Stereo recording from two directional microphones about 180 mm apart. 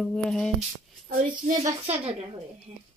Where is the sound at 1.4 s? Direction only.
40° right (ahead or behind).